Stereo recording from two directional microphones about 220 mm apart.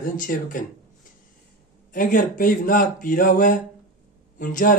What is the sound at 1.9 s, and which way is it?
Speech, 35° left (ahead or behind).